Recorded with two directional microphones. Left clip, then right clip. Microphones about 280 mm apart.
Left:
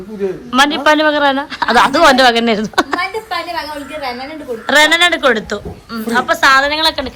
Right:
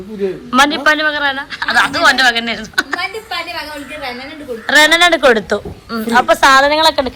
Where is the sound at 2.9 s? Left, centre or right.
Left.